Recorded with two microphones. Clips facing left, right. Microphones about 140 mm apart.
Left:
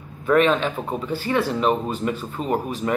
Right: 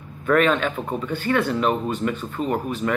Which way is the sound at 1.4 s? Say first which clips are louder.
Even; 5° left (ahead or behind).